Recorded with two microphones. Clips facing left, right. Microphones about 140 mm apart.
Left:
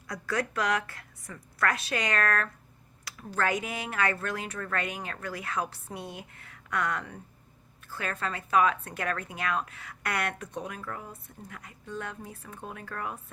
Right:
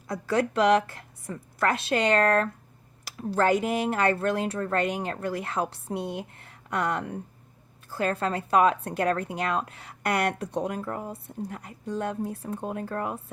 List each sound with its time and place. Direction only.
0.1 s a woman's voice: 30° right (ahead or behind)